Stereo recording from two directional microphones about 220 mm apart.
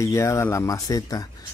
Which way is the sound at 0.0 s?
15° left (ahead or behind).